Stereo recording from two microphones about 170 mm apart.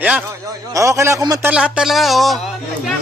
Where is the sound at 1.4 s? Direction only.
5° right (ahead or behind).